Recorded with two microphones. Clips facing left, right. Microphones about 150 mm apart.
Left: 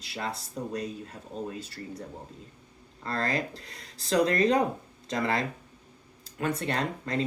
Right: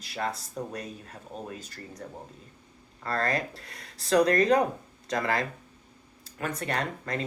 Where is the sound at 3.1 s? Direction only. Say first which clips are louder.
Right 1 dB; 25° left (ahead or behind).